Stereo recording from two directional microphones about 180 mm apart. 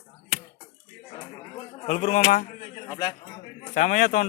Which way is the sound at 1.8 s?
40° left (ahead or behind).